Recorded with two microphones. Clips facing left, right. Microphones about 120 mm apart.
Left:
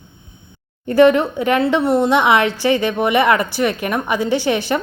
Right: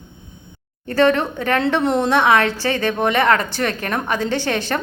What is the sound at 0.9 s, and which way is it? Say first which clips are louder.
A woman's voice: left 4 dB; 15° left (ahead or behind).